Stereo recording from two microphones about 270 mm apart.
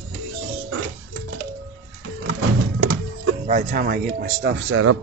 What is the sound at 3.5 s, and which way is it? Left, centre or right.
Speech, right.